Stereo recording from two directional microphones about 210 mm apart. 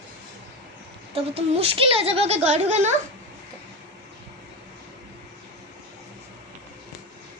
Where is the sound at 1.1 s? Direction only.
25° right (ahead or behind).